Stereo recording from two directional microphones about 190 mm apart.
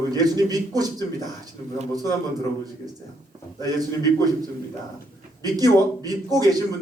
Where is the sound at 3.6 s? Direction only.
20° right (ahead or behind).